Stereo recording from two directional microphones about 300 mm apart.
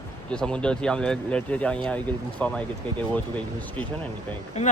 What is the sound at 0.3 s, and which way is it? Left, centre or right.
Speech, centre.